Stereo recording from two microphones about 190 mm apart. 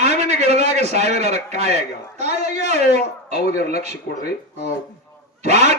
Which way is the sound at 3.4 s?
55° left (ahead or behind).